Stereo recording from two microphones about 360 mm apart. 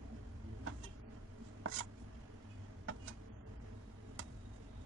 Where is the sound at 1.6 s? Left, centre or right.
Right.